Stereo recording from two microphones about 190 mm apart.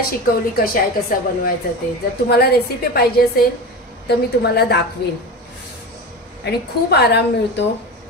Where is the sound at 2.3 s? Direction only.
55° left (ahead or behind).